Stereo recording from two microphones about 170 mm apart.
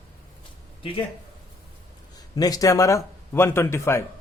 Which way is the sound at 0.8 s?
30° left (ahead or behind).